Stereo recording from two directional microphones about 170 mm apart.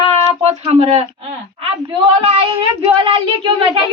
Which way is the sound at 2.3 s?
35° right (ahead or behind).